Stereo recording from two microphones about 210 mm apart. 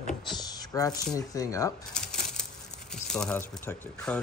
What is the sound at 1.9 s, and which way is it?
Coin, 5° left (ahead or behind).